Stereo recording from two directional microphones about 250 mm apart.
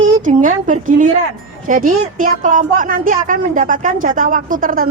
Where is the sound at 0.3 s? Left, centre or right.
Right.